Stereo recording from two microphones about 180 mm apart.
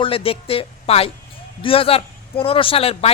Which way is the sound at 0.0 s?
30° left (ahead or behind).